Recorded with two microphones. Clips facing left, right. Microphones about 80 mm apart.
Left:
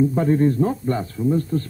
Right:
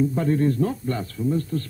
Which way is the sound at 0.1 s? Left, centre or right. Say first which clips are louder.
Left 3 dB; left.